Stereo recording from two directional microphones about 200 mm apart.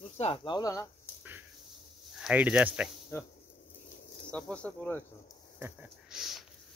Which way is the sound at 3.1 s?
15° left (ahead or behind).